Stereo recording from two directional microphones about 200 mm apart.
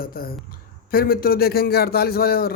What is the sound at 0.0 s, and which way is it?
A man's voice, 50° left (ahead or behind).